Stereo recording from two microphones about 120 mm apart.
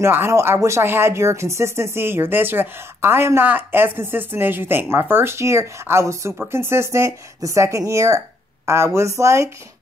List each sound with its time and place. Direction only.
0.0 s speech: 20° right (ahead or behind)